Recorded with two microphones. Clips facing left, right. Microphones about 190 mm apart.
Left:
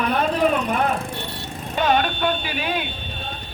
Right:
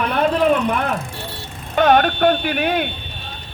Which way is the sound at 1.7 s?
55° right (ahead or behind).